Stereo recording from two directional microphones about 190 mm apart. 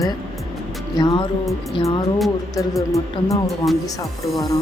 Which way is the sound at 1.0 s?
25° left (ahead or behind).